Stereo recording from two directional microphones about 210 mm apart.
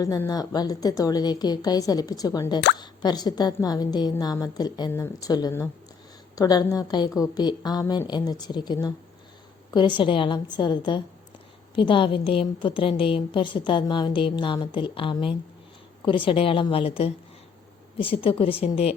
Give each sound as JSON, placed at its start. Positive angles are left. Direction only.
{"t": 0.0, "sound": "a woman's voice", "side_deg": 15}
{"t": 10.0, "sound": "a woman's voice", "side_deg": 25}